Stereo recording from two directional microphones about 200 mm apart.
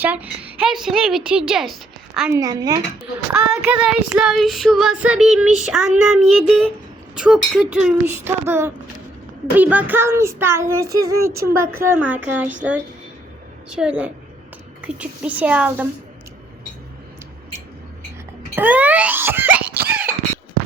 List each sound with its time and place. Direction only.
0.0 s a woman's voice: 10° right (ahead or behind)
2.3 s child singing: 20° right (ahead or behind)
3.3 s child singing: 5° right (ahead or behind)
13.7 s child singing: 5° right (ahead or behind)
18.5 s wail: 10° right (ahead or behind)